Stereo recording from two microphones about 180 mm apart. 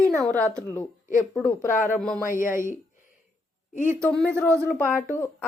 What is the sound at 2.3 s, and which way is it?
Speech, 45° left (ahead or behind).